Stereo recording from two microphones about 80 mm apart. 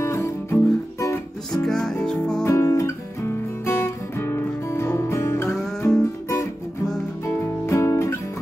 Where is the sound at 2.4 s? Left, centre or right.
Left.